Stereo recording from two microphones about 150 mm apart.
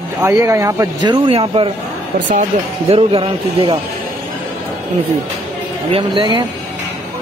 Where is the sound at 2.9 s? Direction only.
40° right (ahead or behind).